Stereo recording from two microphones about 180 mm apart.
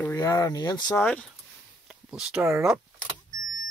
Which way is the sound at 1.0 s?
5° left (ahead or behind).